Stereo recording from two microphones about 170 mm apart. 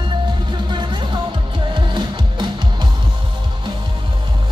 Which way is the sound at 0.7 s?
25° right (ahead or behind).